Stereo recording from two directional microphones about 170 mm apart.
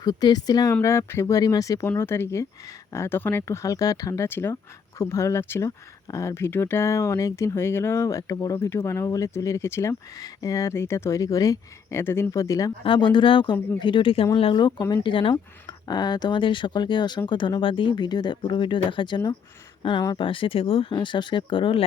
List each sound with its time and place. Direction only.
0.0 s speech: 25° left (ahead or behind)
12.8 s speech: 30° left (ahead or behind)